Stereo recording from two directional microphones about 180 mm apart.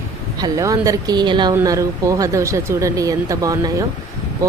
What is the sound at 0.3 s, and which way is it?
Speech, 20° right (ahead or behind).